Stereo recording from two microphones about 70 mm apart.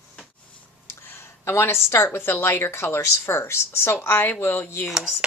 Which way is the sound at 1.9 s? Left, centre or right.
Left.